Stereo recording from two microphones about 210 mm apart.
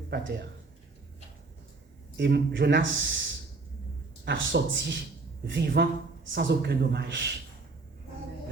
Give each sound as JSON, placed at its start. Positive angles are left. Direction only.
{"t": 0.1, "sound": "a man's voice", "side_deg": -55}
{"t": 2.1, "sound": "a man's voice", "side_deg": -55}
{"t": 4.3, "sound": "a man's voice", "side_deg": -60}